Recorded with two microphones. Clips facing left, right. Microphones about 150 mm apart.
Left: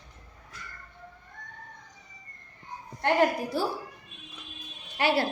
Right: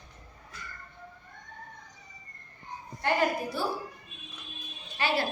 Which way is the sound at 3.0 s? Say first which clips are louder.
Left 3 dB; 65° left (ahead or behind).